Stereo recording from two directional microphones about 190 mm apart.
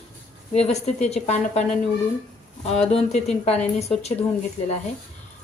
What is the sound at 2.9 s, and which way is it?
Speech, 35° left (ahead or behind).